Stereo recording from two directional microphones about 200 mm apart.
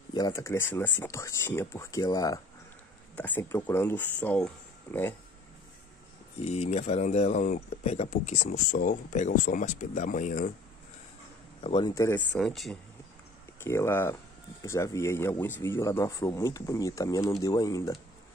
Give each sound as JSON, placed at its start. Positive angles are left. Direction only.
{"t": 0.1, "sound": "a man's voice", "side_deg": 20}
{"t": 6.4, "sound": "speech", "side_deg": 30}
{"t": 11.6, "sound": "speech", "side_deg": 25}
{"t": 12.4, "sound": "speech", "side_deg": 0}
{"t": 13.6, "sound": "a man's voice", "side_deg": 15}